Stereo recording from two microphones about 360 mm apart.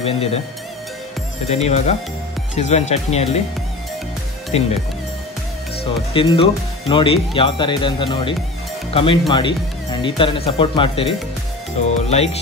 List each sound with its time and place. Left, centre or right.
0.0 s speech: centre
1.5 s speech: centre
4.5 s speech: centre
6.1 s speech: centre